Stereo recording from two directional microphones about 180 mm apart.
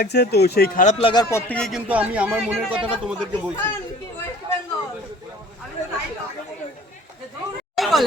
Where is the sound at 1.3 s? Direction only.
5° left (ahead or behind).